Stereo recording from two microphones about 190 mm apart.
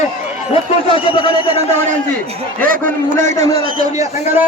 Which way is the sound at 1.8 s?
35° right (ahead or behind).